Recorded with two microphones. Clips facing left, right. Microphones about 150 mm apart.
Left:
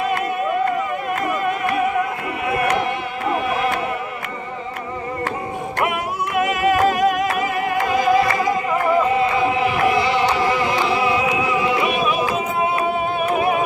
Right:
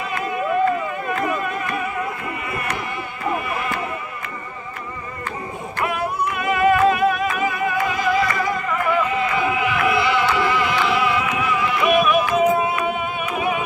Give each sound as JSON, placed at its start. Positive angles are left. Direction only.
{"t": 1.2, "sound": "a sound", "side_deg": 65}
{"t": 3.3, "sound": "music", "side_deg": 70}
{"t": 5.8, "sound": "music", "side_deg": 70}
{"t": 7.9, "sound": "music", "side_deg": 45}